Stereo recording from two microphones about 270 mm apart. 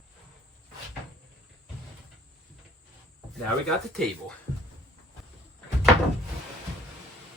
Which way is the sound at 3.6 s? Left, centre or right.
Centre.